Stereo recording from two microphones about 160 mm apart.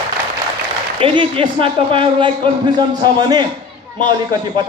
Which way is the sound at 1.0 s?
35° right (ahead or behind).